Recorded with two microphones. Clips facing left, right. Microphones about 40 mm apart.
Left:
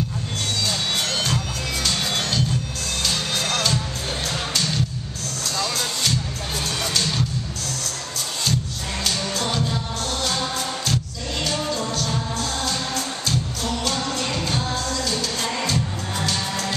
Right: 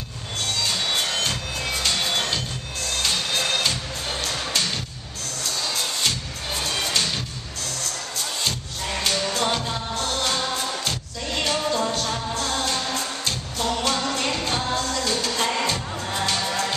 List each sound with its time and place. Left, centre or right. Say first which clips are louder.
1.9 s music: even; centre
9.0 s music: right 1 dB; centre
11.3 s music: right 2 dB; centre
13.2 s music: left 1 dB; centre